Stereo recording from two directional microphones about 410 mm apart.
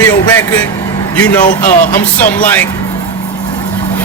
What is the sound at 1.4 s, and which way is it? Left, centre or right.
Music, centre.